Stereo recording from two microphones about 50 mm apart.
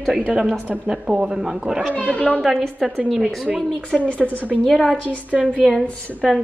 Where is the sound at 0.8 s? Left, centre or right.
Centre.